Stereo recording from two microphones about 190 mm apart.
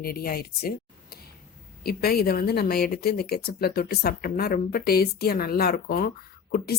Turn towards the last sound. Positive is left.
turn(degrees=55)  # may be behind; listen again after turning